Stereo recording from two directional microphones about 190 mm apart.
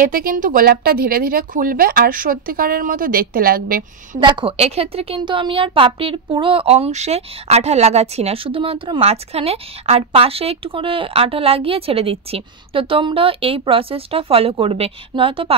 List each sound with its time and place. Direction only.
0.0 s speech: 50° right (ahead or behind)
4.2 s a woman's voice: 25° right (ahead or behind)